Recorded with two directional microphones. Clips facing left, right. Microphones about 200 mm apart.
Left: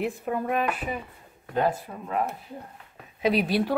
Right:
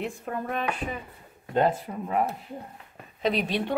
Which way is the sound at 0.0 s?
5° left (ahead or behind).